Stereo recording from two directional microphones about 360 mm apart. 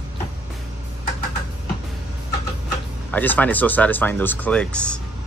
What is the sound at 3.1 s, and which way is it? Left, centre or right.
Speech, centre.